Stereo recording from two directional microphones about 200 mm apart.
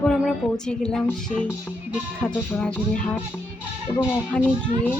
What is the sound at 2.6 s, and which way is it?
Speech, 5° left (ahead or behind).